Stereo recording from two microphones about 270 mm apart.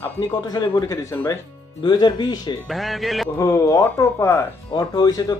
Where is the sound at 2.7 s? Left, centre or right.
Centre.